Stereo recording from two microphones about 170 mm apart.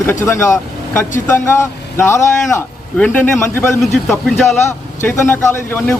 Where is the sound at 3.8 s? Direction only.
Centre (ahead or behind).